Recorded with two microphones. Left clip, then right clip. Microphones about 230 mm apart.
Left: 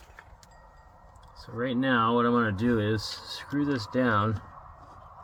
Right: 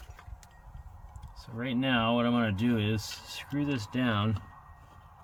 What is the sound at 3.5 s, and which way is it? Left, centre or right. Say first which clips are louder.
Speech: left 4 dB; right.